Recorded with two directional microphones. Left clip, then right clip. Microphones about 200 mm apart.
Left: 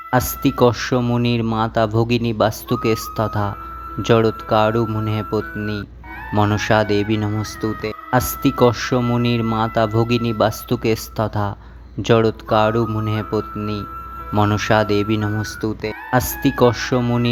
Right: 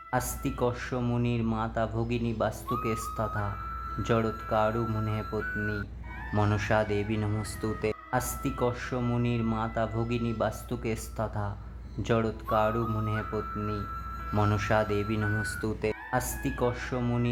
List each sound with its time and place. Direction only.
0.1 s speech: 30° left (ahead or behind)
8.1 s speech: 30° left (ahead or behind)
15.6 s speech: 15° left (ahead or behind)
16.0 s speech: 30° left (ahead or behind)